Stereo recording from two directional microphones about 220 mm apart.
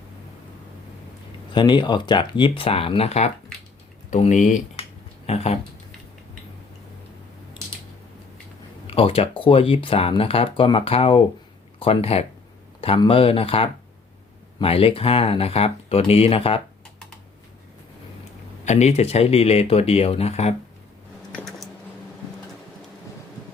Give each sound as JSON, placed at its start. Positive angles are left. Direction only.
{"t": 1.5, "sound": "speech", "side_deg": 20}
{"t": 8.9, "sound": "speech", "side_deg": 25}
{"t": 18.6, "sound": "speech", "side_deg": 30}
{"t": 21.3, "sound": "a sound", "side_deg": 0}